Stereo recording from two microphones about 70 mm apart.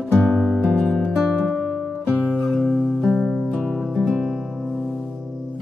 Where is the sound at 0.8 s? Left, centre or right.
Centre.